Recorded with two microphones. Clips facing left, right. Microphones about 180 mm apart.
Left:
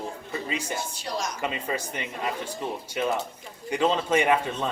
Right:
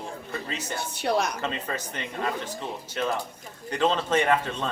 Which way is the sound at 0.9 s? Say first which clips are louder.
Right 6 dB; 60° right (ahead or behind).